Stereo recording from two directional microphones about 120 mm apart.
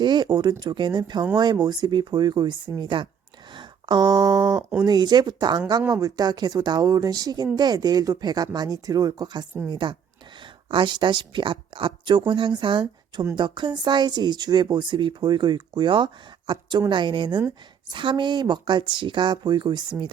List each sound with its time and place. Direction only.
0.0 s a woman's voice: 40° right (ahead or behind)